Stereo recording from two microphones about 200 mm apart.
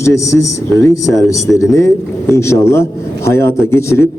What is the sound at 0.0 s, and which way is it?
A man's voice, 15° left (ahead or behind).